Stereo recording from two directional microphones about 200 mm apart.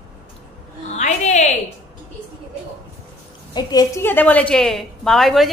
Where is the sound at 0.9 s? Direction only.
35° left (ahead or behind).